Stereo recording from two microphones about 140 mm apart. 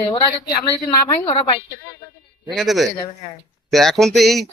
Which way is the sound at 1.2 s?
40° left (ahead or behind).